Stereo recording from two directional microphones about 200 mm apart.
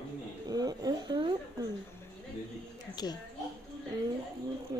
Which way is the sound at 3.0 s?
20° left (ahead or behind).